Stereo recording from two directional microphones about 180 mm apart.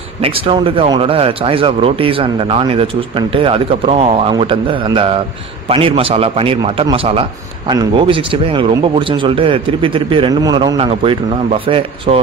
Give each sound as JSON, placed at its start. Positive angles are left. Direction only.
{"t": 0.2, "sound": "a man's voice", "side_deg": -30}